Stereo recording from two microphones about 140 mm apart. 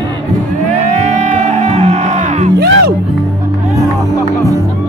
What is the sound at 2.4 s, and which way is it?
Music, 90° right.